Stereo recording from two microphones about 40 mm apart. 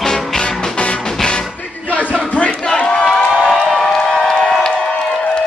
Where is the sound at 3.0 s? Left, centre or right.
Centre.